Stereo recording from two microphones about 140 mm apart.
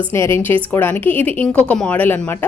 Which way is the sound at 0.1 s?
15° left (ahead or behind).